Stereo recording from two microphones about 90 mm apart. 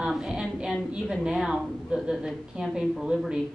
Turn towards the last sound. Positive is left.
turn(degrees=-10)  # may be behind; listen again after turning